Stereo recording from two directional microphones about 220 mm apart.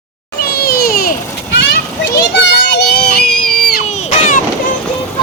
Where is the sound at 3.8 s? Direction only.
30° left (ahead or behind).